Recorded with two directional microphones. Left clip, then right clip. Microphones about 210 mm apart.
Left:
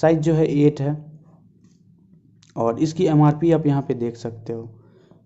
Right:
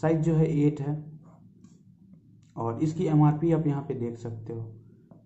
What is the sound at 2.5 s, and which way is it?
Speech, 40° left (ahead or behind).